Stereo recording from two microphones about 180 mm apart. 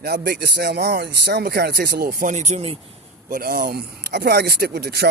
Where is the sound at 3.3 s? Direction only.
55° right (ahead or behind).